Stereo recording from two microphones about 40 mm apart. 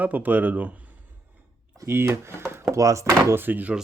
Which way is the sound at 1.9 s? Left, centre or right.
Right.